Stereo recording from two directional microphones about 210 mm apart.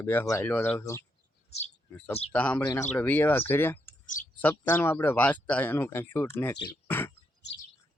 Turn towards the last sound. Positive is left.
turn(degrees=55)  # may be behind; listen again after turning